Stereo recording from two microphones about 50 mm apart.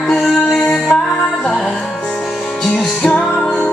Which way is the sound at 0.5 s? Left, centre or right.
Centre.